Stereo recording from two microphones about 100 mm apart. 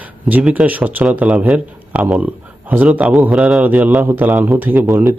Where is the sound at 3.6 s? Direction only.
15° right (ahead or behind).